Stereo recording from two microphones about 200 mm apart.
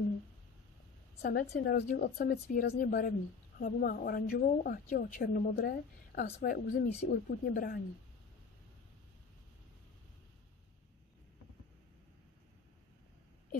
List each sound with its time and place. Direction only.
1.2 s a woman's voice: 55° left (ahead or behind)